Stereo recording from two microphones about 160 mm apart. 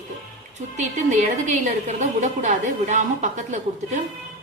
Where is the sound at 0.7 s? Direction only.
50° right (ahead or behind).